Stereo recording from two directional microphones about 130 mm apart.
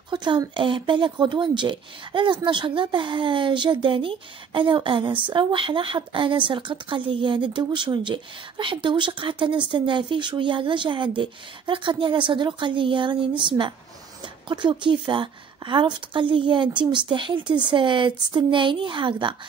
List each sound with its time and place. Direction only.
0.1 s a woman's voice: 35° right (ahead or behind)